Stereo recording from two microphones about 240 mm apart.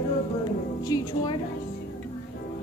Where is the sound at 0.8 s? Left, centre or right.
Centre.